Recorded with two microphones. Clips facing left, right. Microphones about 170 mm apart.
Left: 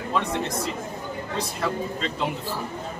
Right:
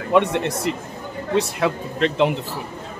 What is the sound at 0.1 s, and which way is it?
A man's voice, 65° right (ahead or behind).